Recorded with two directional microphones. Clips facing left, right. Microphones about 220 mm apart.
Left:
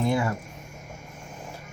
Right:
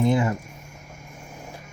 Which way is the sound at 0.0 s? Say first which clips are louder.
Right 4 dB; 20° right (ahead or behind).